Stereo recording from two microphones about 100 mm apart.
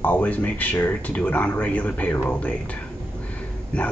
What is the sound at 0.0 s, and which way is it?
A man's voice, 15° left (ahead or behind).